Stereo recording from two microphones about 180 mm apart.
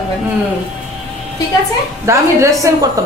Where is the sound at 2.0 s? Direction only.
15° right (ahead or behind).